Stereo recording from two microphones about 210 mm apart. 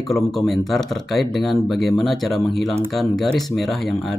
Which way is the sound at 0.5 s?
Centre (ahead or behind).